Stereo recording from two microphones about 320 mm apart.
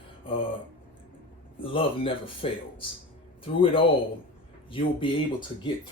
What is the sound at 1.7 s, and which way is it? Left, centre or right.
Speech, centre.